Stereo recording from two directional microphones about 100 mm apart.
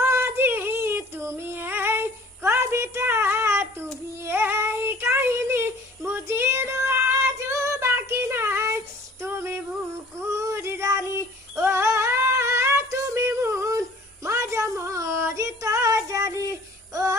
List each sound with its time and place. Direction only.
0.0 s a sound: 25° right (ahead or behind)
4.2 s child singing: 25° right (ahead or behind)
9.2 s female singing: 25° right (ahead or behind)
10.3 s child singing: 30° right (ahead or behind)